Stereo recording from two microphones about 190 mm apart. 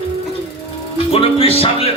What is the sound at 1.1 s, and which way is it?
Speech, 30° left (ahead or behind).